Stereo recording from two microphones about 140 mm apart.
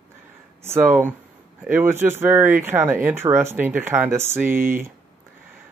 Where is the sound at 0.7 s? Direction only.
15° right (ahead or behind).